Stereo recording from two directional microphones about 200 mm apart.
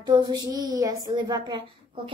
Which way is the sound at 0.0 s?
20° right (ahead or behind).